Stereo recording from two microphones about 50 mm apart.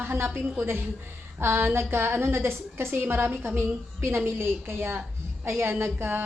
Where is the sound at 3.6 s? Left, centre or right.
Right.